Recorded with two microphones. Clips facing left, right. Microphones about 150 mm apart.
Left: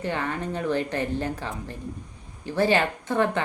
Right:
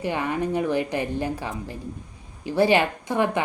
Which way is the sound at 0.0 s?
15° right (ahead or behind).